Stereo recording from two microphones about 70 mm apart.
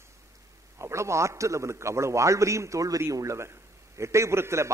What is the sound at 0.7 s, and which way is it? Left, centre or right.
A man's voice, right.